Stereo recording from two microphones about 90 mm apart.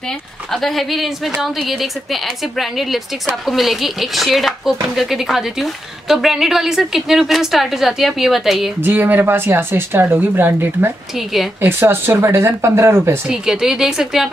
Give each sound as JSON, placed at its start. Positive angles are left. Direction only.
{"t": 0.5, "sound": "a woman's voice", "side_deg": 0}
{"t": 8.8, "sound": "speech", "side_deg": -20}
{"t": 11.1, "sound": "a woman's voice", "side_deg": 0}
{"t": 11.6, "sound": "speech", "side_deg": -20}
{"t": 13.3, "sound": "a woman's voice", "side_deg": -5}